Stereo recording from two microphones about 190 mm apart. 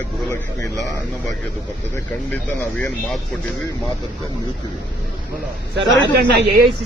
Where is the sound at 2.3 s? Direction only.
10° left (ahead or behind).